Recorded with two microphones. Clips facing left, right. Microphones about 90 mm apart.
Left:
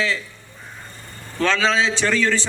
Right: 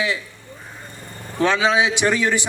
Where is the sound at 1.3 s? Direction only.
15° right (ahead or behind).